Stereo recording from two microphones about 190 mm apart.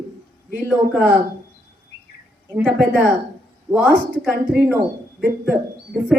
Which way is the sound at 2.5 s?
10° right (ahead or behind).